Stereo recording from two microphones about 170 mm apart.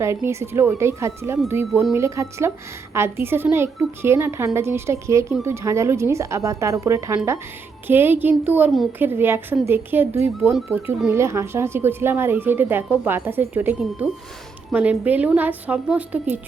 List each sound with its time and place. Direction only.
0.0 s a woman's voice: 15° right (ahead or behind)